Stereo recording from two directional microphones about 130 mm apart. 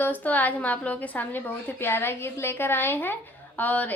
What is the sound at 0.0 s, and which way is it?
A woman's voice, 15° left (ahead or behind).